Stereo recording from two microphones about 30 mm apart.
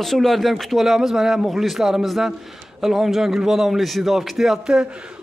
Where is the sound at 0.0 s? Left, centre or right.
Centre.